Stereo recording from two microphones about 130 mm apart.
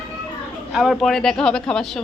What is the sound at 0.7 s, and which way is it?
Speech, centre (ahead or behind).